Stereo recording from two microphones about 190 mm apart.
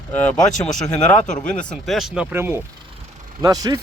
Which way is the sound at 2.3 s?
10° right (ahead or behind).